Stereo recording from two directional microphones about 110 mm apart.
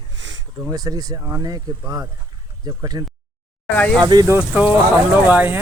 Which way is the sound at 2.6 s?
35° right (ahead or behind).